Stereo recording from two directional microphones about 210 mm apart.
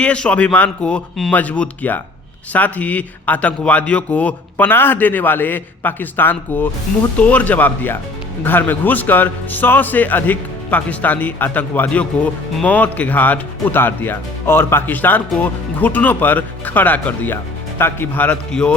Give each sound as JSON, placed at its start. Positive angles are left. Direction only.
{"t": 0.0, "sound": "a man's voice", "side_deg": 5}